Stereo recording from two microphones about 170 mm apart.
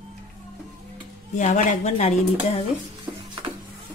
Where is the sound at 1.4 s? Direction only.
45° left (ahead or behind).